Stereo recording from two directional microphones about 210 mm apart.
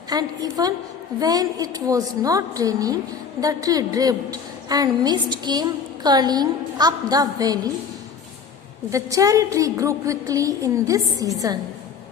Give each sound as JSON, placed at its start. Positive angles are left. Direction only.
{"t": 0.1, "sound": "a woman's voice", "side_deg": -20}
{"t": 8.9, "sound": "a woman's voice", "side_deg": -15}